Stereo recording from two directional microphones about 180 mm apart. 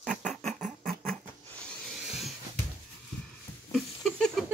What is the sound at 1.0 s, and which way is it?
Cat, 5° left (ahead or behind).